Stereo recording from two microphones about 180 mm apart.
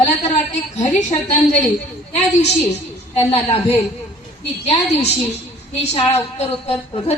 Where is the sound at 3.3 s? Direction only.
30° left (ahead or behind).